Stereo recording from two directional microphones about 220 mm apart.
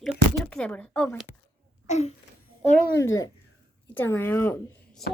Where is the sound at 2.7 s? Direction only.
15° left (ahead or behind).